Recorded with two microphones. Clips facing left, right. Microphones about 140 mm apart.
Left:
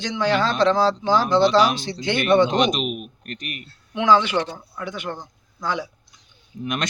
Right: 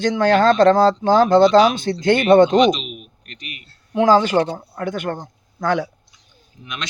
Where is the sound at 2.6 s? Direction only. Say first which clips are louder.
Right 5 dB; 50° left (ahead or behind).